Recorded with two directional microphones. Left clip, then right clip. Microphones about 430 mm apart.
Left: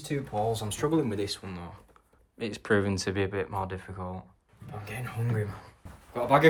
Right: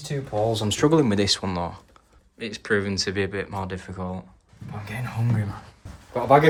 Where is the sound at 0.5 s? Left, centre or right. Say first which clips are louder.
Right 8 dB; right.